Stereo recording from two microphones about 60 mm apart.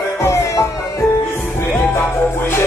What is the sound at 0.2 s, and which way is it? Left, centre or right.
Music, left.